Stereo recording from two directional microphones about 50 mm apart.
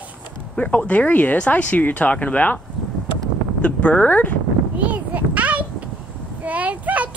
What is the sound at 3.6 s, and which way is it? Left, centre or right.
Speech, left.